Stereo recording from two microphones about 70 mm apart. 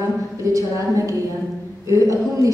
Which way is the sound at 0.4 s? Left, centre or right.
Right.